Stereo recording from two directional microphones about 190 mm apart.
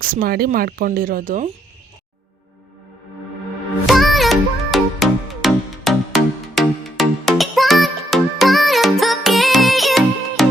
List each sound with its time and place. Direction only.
0.0 s speech: 50° right (ahead or behind)
3.8 s music: centre (ahead or behind)